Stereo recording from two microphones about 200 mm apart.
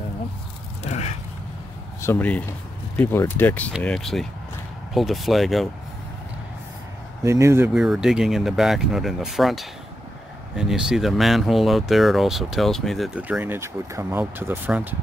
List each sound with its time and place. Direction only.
0.8 s a sound: 35° left (ahead or behind)
2.0 s speech: 10° left (ahead or behind)
7.2 s speech: 15° right (ahead or behind)